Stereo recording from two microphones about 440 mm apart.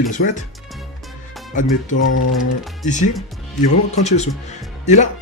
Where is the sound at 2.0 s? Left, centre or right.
Left.